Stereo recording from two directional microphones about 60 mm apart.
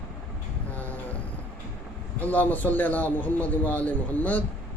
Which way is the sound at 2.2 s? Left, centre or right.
Left.